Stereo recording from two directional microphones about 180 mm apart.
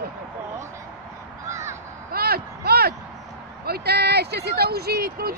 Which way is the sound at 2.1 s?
60° right (ahead or behind).